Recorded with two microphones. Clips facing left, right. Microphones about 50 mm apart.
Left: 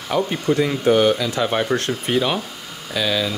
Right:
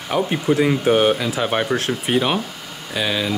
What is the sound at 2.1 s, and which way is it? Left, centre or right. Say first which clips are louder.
Speech: right 1 dB; centre.